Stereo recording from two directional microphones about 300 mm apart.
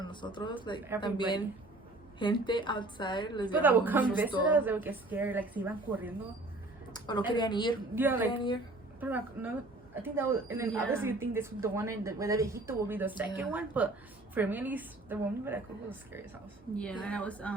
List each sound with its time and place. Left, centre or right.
0.0 s a woman's voice: centre
3.6 s speech: centre
7.3 s a woman's voice: centre
7.9 s a woman's voice: centre
8.3 s a woman's voice: centre
9.0 s a woman's voice: centre
16.7 s speech: centre